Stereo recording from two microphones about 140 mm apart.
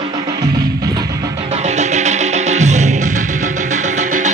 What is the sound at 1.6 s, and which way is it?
Music, 55° right (ahead or behind).